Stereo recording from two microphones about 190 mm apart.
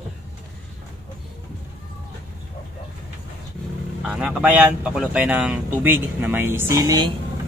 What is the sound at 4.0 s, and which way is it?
Speech, 5° right (ahead or behind).